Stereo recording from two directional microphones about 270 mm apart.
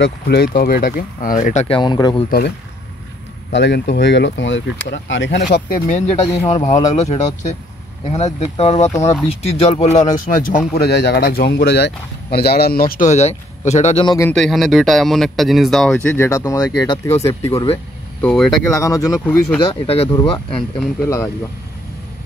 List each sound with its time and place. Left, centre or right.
0.0 s speech: left; by 2.2 s centre
3.5 s speech: left
5.9 s speech: left
19.1 s speech: centre
19.6 s speech: left